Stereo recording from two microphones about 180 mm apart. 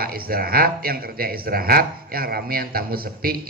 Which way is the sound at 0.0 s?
55° right (ahead or behind).